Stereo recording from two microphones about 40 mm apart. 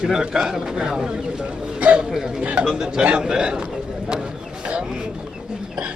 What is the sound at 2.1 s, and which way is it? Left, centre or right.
Speech, centre.